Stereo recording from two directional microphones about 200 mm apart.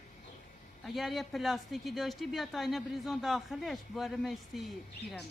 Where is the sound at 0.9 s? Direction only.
Centre (ahead or behind).